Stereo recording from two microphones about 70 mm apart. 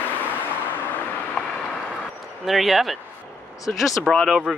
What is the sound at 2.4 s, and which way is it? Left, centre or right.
Speech, centre.